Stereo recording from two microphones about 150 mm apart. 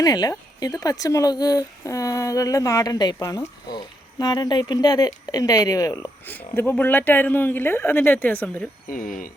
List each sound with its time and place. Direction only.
0.0 s speech: 25° left (ahead or behind)
6.2 s speech: 10° left (ahead or behind)
8.9 s speech: 65° left (ahead or behind)